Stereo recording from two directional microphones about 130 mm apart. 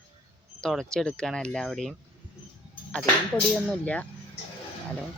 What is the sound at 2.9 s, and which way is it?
Speech, 5° left (ahead or behind).